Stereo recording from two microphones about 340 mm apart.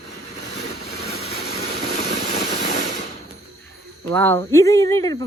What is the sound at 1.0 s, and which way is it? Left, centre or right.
Vehicle, centre.